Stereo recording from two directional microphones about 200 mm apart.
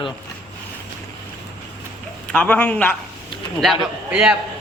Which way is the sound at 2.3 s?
5° left (ahead or behind).